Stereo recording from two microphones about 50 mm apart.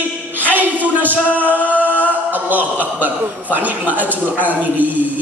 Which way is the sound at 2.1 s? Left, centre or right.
Right.